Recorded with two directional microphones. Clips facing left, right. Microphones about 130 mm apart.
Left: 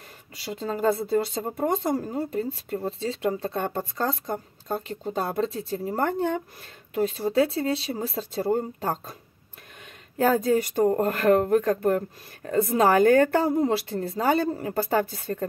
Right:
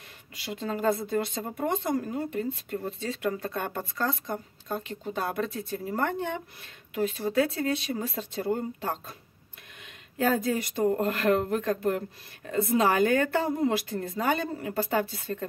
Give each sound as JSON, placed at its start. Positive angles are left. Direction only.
{"t": 0.4, "sound": "speech", "side_deg": 35}
{"t": 10.1, "sound": "speech", "side_deg": 35}